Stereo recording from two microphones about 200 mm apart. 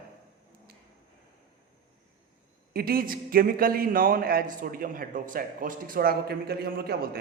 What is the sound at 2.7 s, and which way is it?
A man's voice, 50° right (ahead or behind).